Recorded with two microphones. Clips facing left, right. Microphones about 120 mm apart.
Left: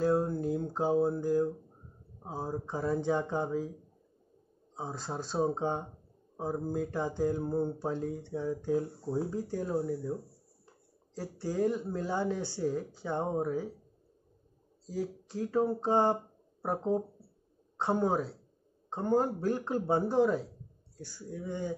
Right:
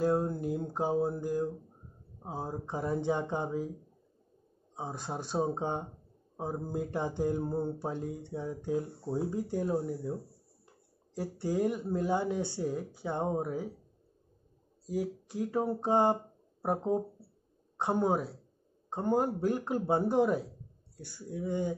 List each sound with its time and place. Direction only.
0.0 s a sound: 15° right (ahead or behind)
2.2 s speech: 15° right (ahead or behind)
4.7 s speech: 15° right (ahead or behind)
11.1 s speech: 20° right (ahead or behind)
14.9 s speech: 15° right (ahead or behind)